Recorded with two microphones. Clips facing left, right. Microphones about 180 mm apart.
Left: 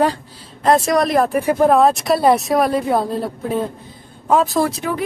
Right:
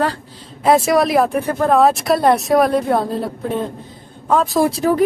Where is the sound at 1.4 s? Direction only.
10° left (ahead or behind).